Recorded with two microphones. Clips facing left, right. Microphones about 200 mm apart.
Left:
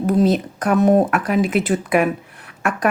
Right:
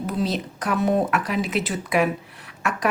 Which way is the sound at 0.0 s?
50° left (ahead or behind).